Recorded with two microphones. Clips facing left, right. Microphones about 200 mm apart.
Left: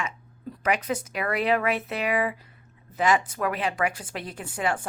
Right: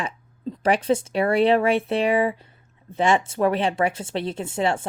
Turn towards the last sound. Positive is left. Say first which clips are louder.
# right 5 dB
turn(degrees=-25)  # may be behind; listen again after turning